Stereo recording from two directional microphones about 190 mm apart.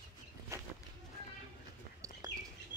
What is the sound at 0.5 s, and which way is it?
Walk, 15° right (ahead or behind).